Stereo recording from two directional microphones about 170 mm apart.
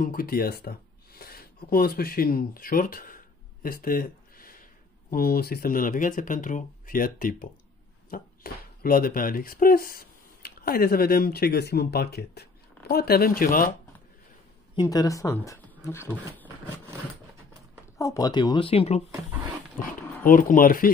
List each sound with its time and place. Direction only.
0.0 s speech: 60° left (ahead or behind)
3.6 s a sound: 60° left (ahead or behind)
5.1 s speech: 65° left (ahead or behind)
8.4 s speech: 60° left (ahead or behind)
14.9 s speech: 20° left (ahead or behind)
17.9 s speech: 20° left (ahead or behind); by 19.0 s 35° left (ahead or behind)
20.2 s speech: 55° left (ahead or behind)